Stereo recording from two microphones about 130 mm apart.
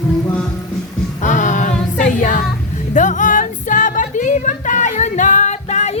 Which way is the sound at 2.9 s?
75° left (ahead or behind).